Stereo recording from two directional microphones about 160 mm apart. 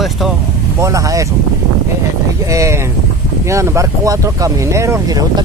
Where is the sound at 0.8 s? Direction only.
20° right (ahead or behind).